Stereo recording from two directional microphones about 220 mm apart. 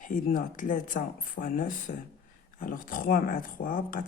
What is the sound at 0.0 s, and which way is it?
Speech, 35° left (ahead or behind).